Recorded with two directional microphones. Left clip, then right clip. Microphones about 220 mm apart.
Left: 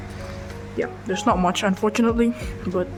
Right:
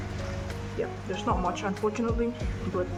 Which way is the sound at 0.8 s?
50° left (ahead or behind).